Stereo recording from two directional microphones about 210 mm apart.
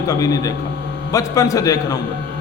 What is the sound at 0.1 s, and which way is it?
A man's voice, 15° left (ahead or behind).